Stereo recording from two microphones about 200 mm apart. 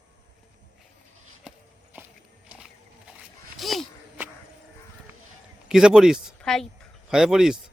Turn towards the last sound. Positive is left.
turn(degrees=-5)  # may be behind; listen again after turning